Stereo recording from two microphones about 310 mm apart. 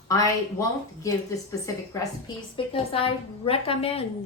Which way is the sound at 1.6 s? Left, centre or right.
Centre.